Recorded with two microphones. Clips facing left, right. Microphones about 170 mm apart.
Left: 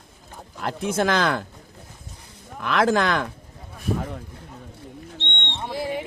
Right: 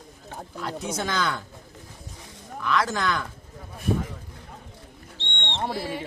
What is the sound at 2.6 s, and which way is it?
Speech, 60° left (ahead or behind).